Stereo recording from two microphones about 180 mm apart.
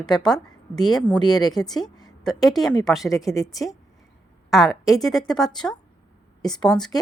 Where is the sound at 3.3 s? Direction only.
20° left (ahead or behind).